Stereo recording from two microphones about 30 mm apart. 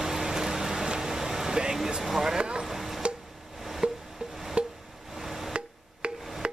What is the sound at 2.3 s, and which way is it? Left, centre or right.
Vehicle, right.